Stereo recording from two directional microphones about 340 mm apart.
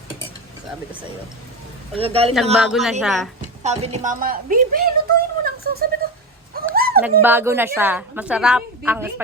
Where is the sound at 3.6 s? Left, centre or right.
Centre.